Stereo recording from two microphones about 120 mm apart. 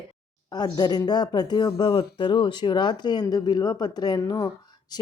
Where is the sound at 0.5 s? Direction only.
35° left (ahead or behind).